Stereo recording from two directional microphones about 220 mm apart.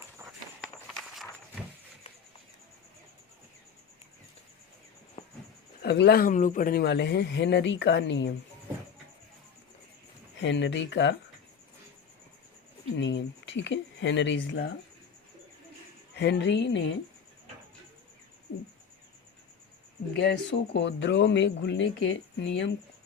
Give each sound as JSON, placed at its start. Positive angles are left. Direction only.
{"t": 0.9, "sound": "walk", "side_deg": 0}
{"t": 5.8, "sound": "speech", "side_deg": 50}
{"t": 10.4, "sound": "speech", "side_deg": 55}
{"t": 13.0, "sound": "a sound", "side_deg": 55}
{"t": 16.1, "sound": "speech", "side_deg": 50}
{"t": 20.1, "sound": "speech", "side_deg": 50}